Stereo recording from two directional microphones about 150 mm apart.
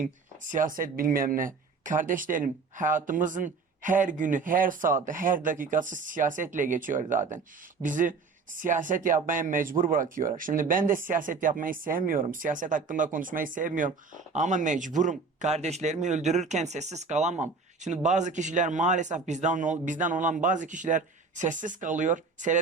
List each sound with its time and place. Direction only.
0.0 s speech: 60° right (ahead or behind)